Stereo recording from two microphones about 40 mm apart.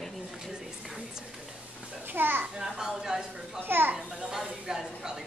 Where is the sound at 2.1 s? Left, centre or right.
Right.